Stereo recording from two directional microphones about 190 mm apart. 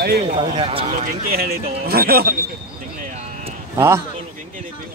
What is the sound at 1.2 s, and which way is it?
Speech, 50° right (ahead or behind).